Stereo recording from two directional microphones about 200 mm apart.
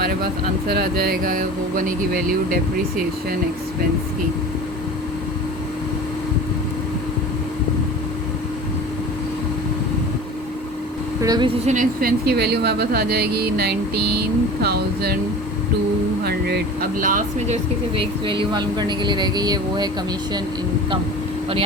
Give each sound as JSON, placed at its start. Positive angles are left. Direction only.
{"t": 0.7, "sound": "speech", "side_deg": -50}
{"t": 11.2, "sound": "speech", "side_deg": -20}
{"t": 11.6, "sound": "speech", "side_deg": -40}
{"t": 16.2, "sound": "speech", "side_deg": -55}
{"t": 17.9, "sound": "speech", "side_deg": -25}